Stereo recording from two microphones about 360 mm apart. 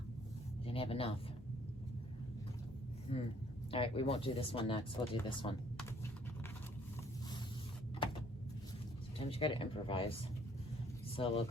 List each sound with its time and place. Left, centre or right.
0.6 s speech: centre
3.1 s speech: centre
9.2 s speech: centre
11.2 s speech: centre